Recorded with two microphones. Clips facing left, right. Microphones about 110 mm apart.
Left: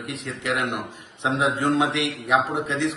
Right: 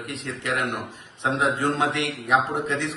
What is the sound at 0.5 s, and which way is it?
Speech, 15° left (ahead or behind).